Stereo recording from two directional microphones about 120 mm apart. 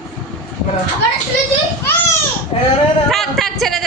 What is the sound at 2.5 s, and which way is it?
Speech, 50° left (ahead or behind).